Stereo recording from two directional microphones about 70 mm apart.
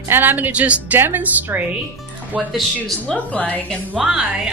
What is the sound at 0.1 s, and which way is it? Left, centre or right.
Speech, right.